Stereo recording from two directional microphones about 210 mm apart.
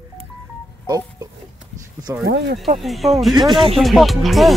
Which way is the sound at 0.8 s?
15° right (ahead or behind).